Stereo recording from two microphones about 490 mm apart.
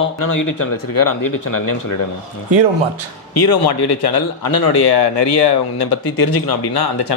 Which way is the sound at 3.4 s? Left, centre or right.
Left.